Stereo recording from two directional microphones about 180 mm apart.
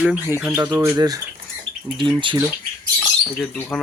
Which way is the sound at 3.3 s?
5° left (ahead or behind).